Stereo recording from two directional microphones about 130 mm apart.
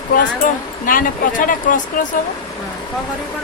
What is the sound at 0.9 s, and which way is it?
Speech, 90° left.